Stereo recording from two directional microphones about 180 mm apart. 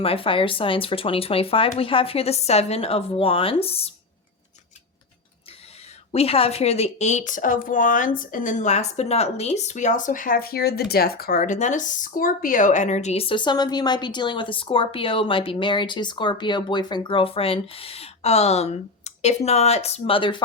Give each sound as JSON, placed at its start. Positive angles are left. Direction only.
{"t": 0.0, "sound": "speech", "side_deg": 30}
{"t": 6.1, "sound": "speech", "side_deg": 35}